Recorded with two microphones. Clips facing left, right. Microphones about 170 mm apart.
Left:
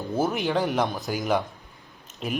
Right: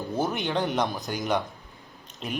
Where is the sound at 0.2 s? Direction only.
Centre (ahead or behind).